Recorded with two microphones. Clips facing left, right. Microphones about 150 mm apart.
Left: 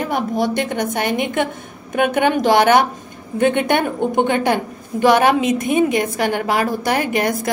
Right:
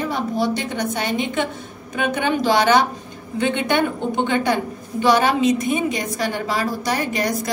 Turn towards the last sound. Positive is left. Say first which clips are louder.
# left 3 dB
turn(degrees=55)  # may be behind; listen again after turning